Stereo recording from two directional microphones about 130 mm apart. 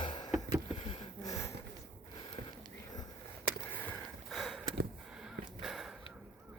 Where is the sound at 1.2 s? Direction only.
25° left (ahead or behind).